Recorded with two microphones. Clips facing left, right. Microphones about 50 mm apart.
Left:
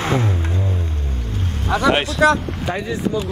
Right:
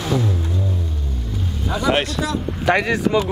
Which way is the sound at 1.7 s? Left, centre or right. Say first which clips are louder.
Left 5 dB; left.